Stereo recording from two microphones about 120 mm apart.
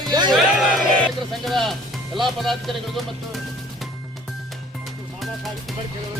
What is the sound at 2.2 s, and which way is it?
Speech, centre (ahead or behind).